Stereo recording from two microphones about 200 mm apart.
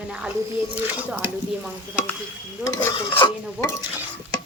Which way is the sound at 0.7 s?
10° right (ahead or behind).